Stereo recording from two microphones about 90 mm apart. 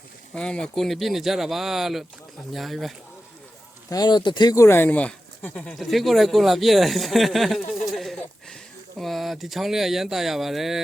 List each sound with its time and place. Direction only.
0.3 s speech: 10° left (ahead or behind)
3.8 s speech: 50° left (ahead or behind)
4.5 s speech: 30° left (ahead or behind)
4.9 s speech: 15° left (ahead or behind)
5.7 s speech: centre (ahead or behind)